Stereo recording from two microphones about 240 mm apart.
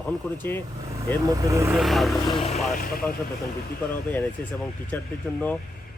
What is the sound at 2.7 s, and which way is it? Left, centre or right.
Speech, left.